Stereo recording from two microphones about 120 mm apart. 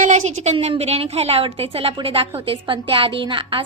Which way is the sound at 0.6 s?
60° right (ahead or behind).